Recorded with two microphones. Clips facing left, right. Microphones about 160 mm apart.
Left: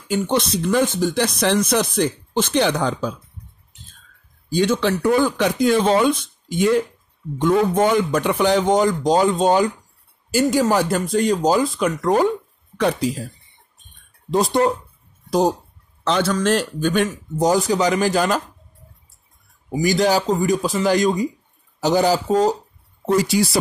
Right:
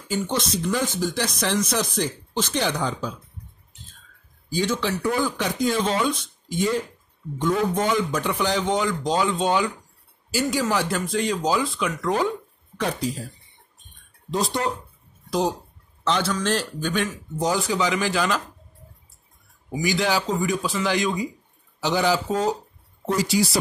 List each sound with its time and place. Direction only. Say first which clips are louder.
0.1 s speech: left 5 dB; 60° left (ahead or behind)
4.5 s speech: left 6 dB; 65° left (ahead or behind)
7.3 s a man's voice: left 6 dB; 60° left (ahead or behind); by 12.3 s 45° left (ahead or behind)
12.7 s speech: left 6 dB; 70° left (ahead or behind)
14.3 s a man's voice: left 7 dB; 50° left (ahead or behind)
16.0 s a man's voice: left 4 dB; 50° left (ahead or behind)
19.7 s a man's voice: left 6 dB; 40° left (ahead or behind)
23.1 s speech: left 4 dB; 55° left (ahead or behind)